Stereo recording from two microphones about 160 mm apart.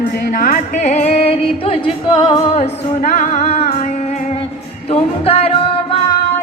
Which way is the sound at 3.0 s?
45° left (ahead or behind).